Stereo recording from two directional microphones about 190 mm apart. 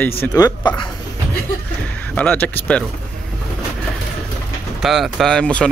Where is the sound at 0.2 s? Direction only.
20° left (ahead or behind).